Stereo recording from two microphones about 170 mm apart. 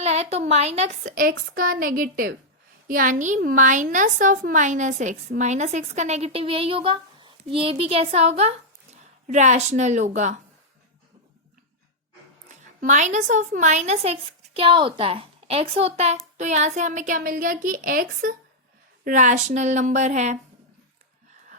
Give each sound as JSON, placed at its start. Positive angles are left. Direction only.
{"t": 0.0, "sound": "a woman's voice", "side_deg": -40}
{"t": 1.1, "sound": "a woman's voice", "side_deg": -55}
{"t": 12.8, "sound": "a woman's voice", "side_deg": -45}